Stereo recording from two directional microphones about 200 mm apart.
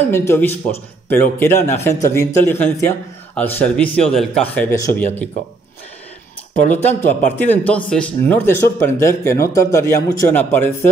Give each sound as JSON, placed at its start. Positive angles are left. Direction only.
{"t": 0.1, "sound": "speech", "side_deg": 10}
{"t": 4.6, "sound": "speech", "side_deg": 15}
{"t": 6.7, "sound": "speech", "side_deg": 10}